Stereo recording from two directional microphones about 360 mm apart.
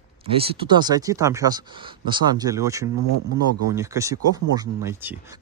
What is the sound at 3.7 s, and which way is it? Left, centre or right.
Speech, centre.